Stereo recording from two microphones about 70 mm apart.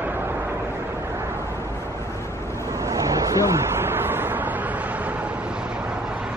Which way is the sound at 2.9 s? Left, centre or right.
Right.